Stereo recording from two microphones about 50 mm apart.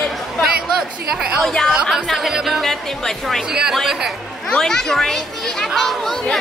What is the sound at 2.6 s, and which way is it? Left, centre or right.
Speech, centre.